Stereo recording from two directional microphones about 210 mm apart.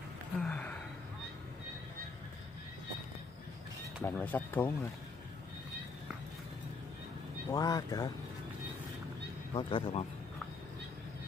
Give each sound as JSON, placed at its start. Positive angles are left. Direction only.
{"t": 0.4, "sound": "gasp", "side_deg": 5}
{"t": 4.0, "sound": "speech", "side_deg": 10}
{"t": 7.5, "sound": "speech", "side_deg": 15}
{"t": 9.5, "sound": "speech", "side_deg": 25}